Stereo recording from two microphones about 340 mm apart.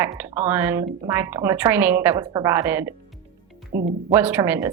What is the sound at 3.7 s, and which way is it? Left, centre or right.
Speech, right.